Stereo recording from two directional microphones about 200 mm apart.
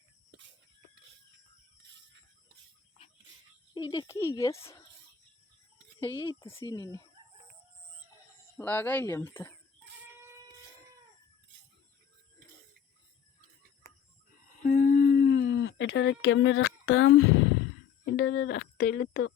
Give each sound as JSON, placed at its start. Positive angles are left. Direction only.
{"t": 3.8, "sound": "speech", "side_deg": 20}
{"t": 6.0, "sound": "speech", "side_deg": 15}
{"t": 8.5, "sound": "speech", "side_deg": 10}
{"t": 14.6, "sound": "a sound", "side_deg": 45}
{"t": 18.0, "sound": "speech", "side_deg": 65}